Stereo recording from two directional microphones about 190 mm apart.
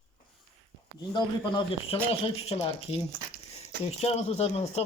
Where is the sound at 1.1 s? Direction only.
25° left (ahead or behind).